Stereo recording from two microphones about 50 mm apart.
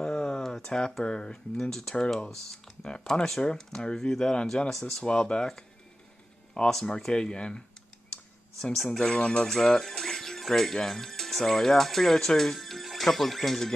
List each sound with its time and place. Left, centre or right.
0.0 s a sound: centre
0.7 s speech: centre
4.6 s speech: centre
5.0 s speech: centre
6.7 s speech: centre
8.7 s speech: centre